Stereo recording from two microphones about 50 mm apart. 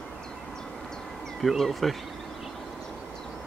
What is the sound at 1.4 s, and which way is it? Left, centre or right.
Speech, centre.